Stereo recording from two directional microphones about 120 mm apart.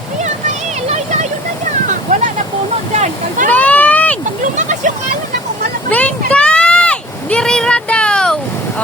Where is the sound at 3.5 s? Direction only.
15° left (ahead or behind).